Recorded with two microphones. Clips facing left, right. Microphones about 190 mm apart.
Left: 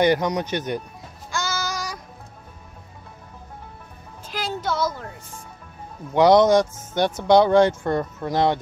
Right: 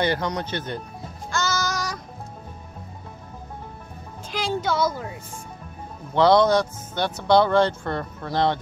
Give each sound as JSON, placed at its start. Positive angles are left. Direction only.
{"t": 0.0, "sound": "speech", "side_deg": 15}
{"t": 1.3, "sound": "child singing", "side_deg": 10}
{"t": 4.3, "sound": "a sound", "side_deg": 5}
{"t": 6.1, "sound": "speech", "side_deg": 20}